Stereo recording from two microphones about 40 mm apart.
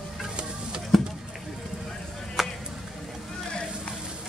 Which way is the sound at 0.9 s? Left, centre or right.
Centre.